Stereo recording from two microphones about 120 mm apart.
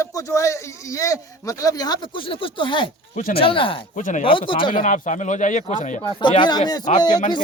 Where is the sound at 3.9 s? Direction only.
90° left.